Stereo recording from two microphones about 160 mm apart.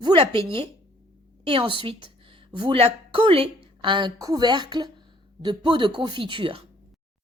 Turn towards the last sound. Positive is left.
turn(degrees=-35)  # may be behind; listen again after turning